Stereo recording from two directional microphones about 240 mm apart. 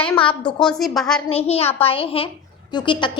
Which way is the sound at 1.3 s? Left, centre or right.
Left.